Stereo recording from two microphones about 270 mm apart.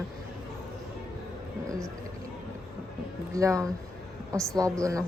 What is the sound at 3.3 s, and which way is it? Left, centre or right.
A woman's voice, centre.